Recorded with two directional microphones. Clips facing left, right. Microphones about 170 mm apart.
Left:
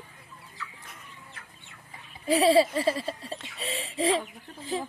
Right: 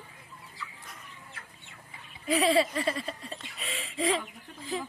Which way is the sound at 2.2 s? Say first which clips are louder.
Left 4 dB; 30° left (ahead or behind).